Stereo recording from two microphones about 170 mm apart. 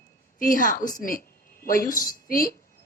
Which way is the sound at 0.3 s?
55° left (ahead or behind).